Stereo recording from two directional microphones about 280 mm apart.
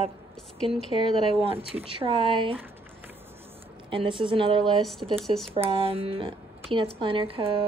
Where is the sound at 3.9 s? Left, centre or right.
Centre.